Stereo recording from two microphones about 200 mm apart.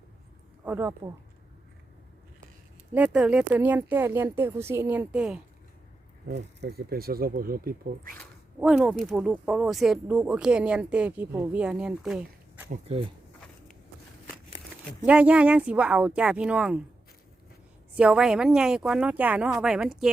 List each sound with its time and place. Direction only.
0.6 s speech: 10° right (ahead or behind)
2.9 s speech: 5° right (ahead or behind)
6.2 s speech: 55° right (ahead or behind)
8.5 s speech: 5° right (ahead or behind)
12.7 s speech: 30° right (ahead or behind)
15.0 s speech: 5° right (ahead or behind)
17.9 s speech: 5° right (ahead or behind)